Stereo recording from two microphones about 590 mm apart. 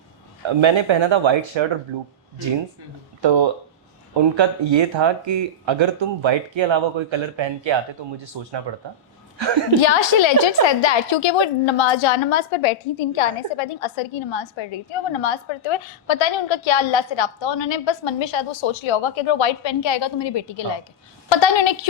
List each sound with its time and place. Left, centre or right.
0.4 s speech: right
3.2 s speech: right
9.8 s a woman's voice: left